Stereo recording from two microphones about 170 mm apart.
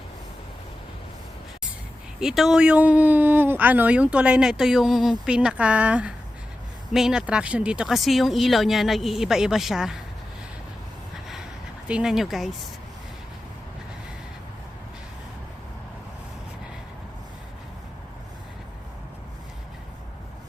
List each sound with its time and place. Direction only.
2.2 s speech: centre (ahead or behind)
11.9 s speech: 5° right (ahead or behind)